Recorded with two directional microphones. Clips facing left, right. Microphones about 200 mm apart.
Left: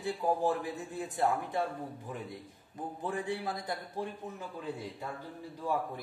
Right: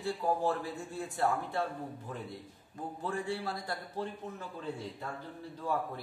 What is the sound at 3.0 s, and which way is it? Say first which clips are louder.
A man's voice: even; 20° left (ahead or behind).